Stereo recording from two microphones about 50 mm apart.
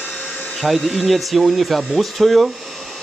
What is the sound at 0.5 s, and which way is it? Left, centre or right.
Speech, centre.